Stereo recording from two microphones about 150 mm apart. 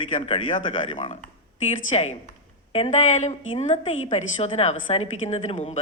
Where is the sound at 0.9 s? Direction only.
50° left (ahead or behind).